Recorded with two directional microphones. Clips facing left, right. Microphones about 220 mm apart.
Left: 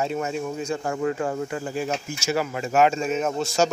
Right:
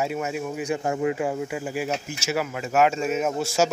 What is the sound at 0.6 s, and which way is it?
Speech, 15° right (ahead or behind).